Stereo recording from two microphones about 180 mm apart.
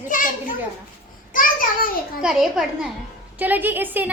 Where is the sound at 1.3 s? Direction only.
50° left (ahead or behind).